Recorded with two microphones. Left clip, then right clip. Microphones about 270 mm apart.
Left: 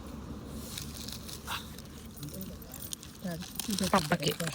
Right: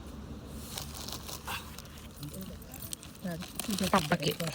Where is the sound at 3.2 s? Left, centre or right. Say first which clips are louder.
Right 1 dB; centre.